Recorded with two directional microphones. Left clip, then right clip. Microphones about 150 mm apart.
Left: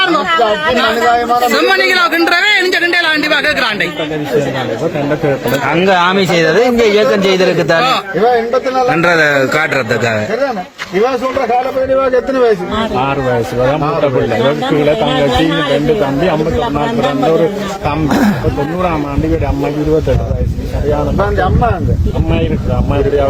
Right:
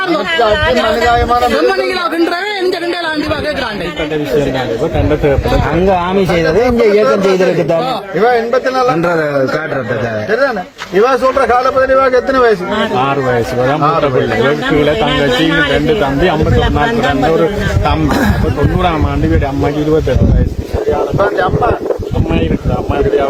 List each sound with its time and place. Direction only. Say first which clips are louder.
1.8 s a man's voice: left 3 dB; 15° right (ahead or behind)
6.7 s a man's voice: even; centre (ahead or behind)
11.1 s a man's voice: right 4 dB; 10° right (ahead or behind)
11.9 s a man's voice: right 2 dB; 35° left (ahead or behind)
14.4 s speech: even; centre (ahead or behind)
18.1 s a man's voice: left 1 dB; 55° left (ahead or behind)